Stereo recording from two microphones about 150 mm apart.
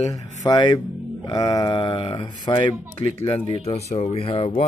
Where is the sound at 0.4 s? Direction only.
30° left (ahead or behind).